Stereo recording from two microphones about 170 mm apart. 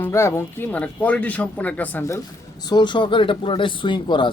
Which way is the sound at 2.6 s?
25° left (ahead or behind).